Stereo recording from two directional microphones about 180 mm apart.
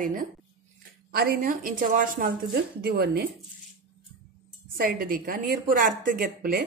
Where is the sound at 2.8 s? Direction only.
60° right (ahead or behind).